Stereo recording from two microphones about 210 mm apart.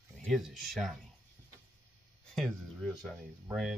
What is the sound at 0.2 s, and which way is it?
Speech, centre (ahead or behind).